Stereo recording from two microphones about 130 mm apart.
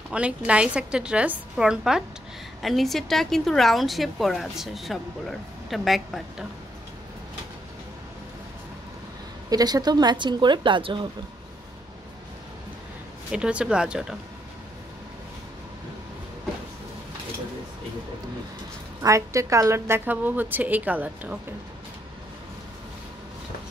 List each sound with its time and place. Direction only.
0.1 s a woman's voice: 10° right (ahead or behind)
9.5 s speech: 30° right (ahead or behind)
13.3 s a woman's voice: 10° right (ahead or behind)
19.0 s a woman's voice: 25° right (ahead or behind)